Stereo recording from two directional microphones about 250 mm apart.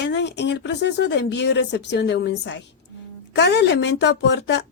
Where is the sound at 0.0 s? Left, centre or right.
Left.